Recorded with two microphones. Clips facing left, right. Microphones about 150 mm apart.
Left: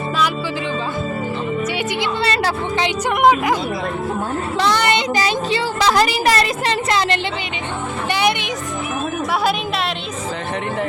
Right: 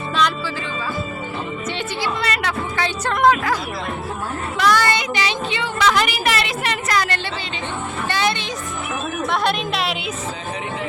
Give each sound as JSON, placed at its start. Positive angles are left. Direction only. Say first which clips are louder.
{"t": 2.0, "sound": "a sound", "louder": "left 3 dB", "side_deg": 30}
{"t": 2.8, "sound": "a woman's voice", "louder": "left 2 dB", "side_deg": 15}
{"t": 4.5, "sound": "a sound", "louder": "even", "side_deg": 25}
{"t": 5.1, "sound": "speech", "louder": "left 4 dB", "side_deg": 35}
{"t": 8.1, "sound": "music", "louder": "left 3 dB", "side_deg": 15}
{"t": 9.4, "sound": "a woman's voice", "louder": "left 1 dB", "side_deg": 5}